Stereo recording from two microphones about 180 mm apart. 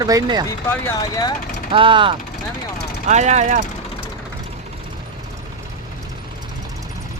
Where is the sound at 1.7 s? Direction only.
30° right (ahead or behind).